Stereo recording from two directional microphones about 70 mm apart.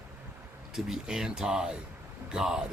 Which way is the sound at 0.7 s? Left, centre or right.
Centre.